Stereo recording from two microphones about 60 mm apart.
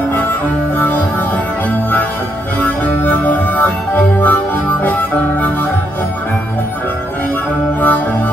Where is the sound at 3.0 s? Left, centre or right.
Left.